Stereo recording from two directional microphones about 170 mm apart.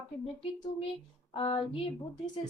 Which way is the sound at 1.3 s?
30° left (ahead or behind).